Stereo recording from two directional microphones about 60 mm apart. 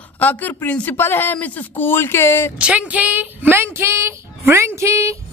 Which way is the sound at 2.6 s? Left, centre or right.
Centre.